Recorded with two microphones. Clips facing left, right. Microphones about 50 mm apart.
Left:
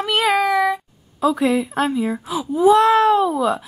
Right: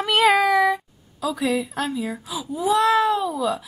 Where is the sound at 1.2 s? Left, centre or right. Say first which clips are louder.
Left 6 dB; left.